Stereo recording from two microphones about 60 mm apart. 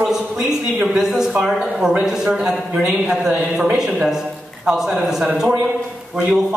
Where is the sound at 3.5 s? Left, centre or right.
Right.